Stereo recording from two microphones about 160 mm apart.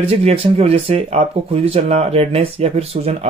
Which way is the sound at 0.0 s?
40° right (ahead or behind).